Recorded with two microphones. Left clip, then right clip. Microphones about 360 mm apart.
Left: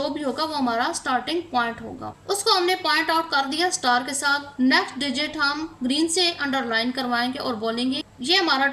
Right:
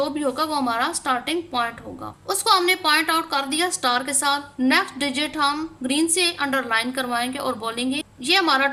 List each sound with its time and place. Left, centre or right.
0.2 s a woman's voice: right